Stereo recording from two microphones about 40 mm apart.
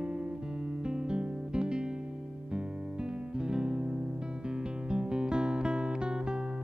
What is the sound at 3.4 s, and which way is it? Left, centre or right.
Music, right.